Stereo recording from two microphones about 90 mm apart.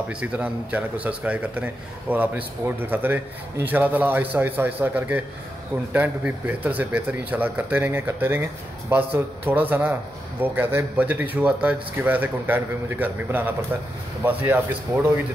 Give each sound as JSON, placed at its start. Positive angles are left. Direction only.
{"t": 0.1, "sound": "a man's voice", "side_deg": -15}